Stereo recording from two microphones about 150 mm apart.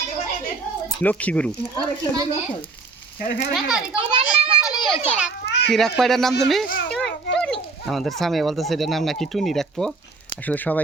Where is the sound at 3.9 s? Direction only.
40° right (ahead or behind).